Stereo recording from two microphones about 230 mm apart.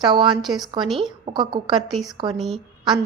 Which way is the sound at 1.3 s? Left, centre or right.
Centre.